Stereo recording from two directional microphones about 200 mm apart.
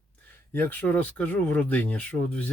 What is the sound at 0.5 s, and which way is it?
Speech, 10° left (ahead or behind).